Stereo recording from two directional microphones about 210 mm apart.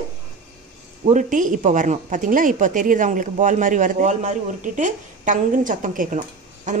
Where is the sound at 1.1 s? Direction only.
40° right (ahead or behind).